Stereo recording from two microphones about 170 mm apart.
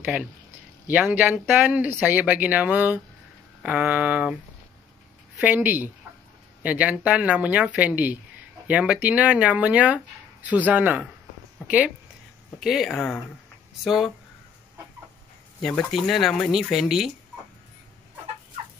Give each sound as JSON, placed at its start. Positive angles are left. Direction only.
{"t": 0.0, "sound": "speech", "side_deg": -5}
{"t": 5.4, "sound": "speech", "side_deg": -10}
{"t": 15.6, "sound": "speech", "side_deg": 0}